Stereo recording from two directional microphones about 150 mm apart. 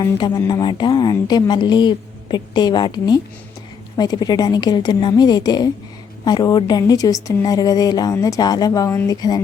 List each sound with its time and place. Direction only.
0.0 s a woman's voice: 30° left (ahead or behind)